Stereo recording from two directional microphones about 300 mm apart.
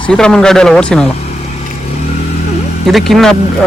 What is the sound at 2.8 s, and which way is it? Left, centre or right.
Speech, centre.